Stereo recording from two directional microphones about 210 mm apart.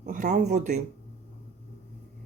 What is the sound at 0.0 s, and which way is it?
Speech, 40° right (ahead or behind).